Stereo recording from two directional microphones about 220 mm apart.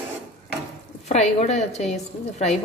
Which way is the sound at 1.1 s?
30° left (ahead or behind).